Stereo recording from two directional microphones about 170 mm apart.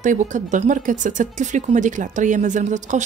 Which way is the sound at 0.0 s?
45° right (ahead or behind).